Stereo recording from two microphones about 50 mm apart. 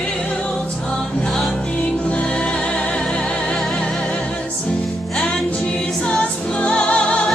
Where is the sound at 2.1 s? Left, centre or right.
Left.